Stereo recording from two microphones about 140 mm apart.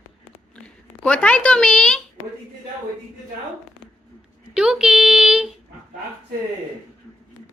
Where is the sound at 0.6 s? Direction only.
10° left (ahead or behind).